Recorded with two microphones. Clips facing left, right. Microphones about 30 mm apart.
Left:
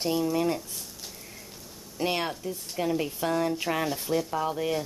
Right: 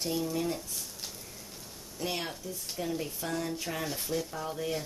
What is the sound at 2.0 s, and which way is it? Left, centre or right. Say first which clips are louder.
Speech: left 7 dB; left.